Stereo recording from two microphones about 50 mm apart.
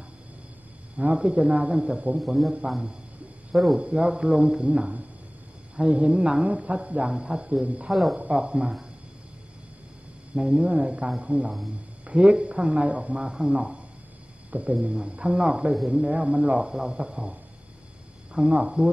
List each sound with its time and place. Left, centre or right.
1.1 s a man's voice: right
2.1 s a man's voice: centre
3.5 s a man's voice: centre
3.9 s a man's voice: right
7.9 s a man's voice: centre
8.3 s a man's voice: right
10.3 s a man's voice: right
13.2 s a man's voice: centre
18.3 s a man's voice: centre